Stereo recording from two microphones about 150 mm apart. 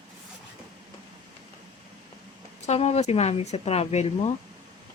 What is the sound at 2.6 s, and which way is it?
A woman's voice, 45° left (ahead or behind).